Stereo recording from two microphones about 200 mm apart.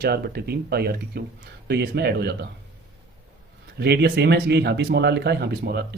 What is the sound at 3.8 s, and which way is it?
Speech, 55° right (ahead or behind).